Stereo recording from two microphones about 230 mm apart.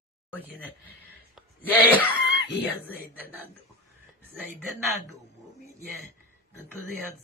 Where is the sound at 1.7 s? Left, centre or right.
Centre.